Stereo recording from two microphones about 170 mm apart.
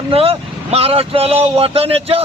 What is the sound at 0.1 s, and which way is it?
Speech, 35° right (ahead or behind).